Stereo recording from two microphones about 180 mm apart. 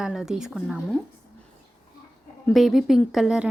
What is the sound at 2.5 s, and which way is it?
Speech, centre (ahead or behind).